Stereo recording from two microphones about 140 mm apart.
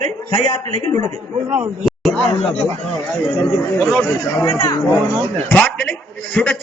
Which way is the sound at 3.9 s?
15° left (ahead or behind).